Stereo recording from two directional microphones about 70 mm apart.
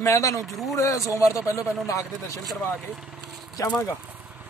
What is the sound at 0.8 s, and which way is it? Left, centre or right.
Speech, left.